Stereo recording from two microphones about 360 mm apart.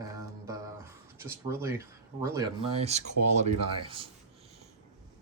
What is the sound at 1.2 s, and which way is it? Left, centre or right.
Speech, centre.